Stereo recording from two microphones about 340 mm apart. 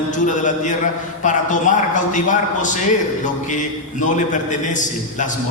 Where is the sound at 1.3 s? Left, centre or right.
Left.